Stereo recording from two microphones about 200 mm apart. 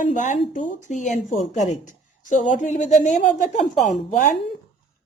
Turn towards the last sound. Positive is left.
turn(degrees=40)  # may be behind; listen again after turning